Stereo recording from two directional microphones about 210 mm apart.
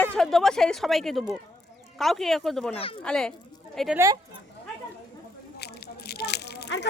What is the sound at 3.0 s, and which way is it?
Speech, 5° left (ahead or behind).